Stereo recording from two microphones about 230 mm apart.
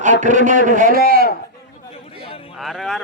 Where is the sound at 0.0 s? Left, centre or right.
Right.